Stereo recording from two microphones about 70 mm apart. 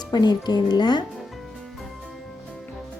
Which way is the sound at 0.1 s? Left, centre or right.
Left.